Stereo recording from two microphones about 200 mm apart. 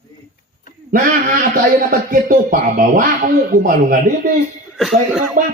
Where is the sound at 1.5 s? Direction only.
45° right (ahead or behind).